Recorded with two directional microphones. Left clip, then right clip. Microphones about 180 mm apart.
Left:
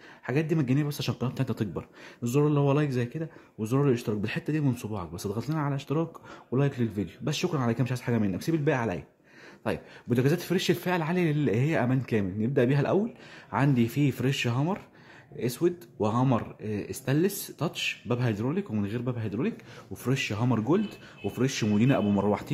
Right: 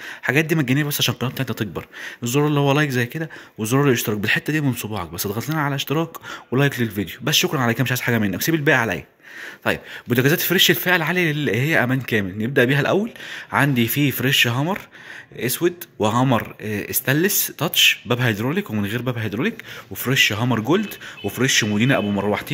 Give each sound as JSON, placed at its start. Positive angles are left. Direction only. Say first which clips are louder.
{"t": 0.2, "sound": "speech", "louder": "right 9 dB", "side_deg": -5}